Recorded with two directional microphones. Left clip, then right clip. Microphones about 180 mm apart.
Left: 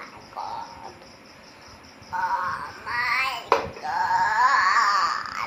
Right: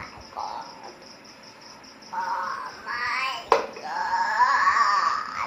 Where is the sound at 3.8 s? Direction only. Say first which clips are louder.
Left 5 dB; 15° left (ahead or behind).